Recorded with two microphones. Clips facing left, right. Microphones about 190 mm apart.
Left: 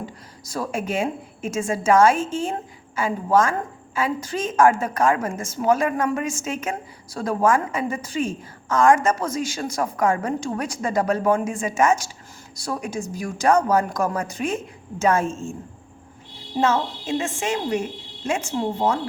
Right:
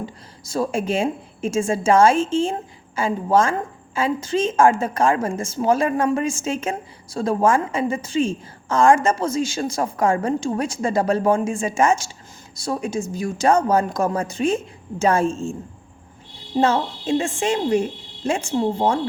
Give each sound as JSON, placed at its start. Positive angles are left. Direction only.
{"t": 0.0, "sound": "a woman's voice", "side_deg": -25}
{"t": 16.6, "sound": "a woman's voice", "side_deg": -30}